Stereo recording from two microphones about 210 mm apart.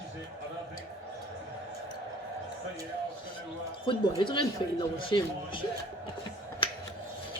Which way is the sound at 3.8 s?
25° left (ahead or behind).